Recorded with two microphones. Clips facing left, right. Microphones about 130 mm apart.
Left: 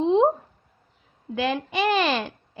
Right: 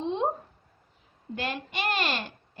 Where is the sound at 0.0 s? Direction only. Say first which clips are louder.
Left 10 dB; 90° left.